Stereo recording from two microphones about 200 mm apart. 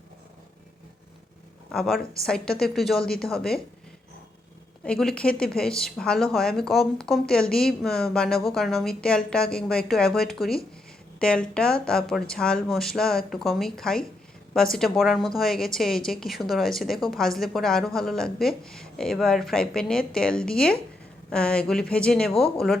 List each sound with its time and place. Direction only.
1.7 s speech: centre (ahead or behind)
4.9 s speech: 5° left (ahead or behind)